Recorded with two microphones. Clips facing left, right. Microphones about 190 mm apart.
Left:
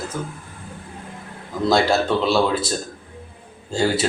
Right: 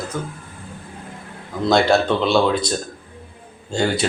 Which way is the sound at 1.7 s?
5° left (ahead or behind).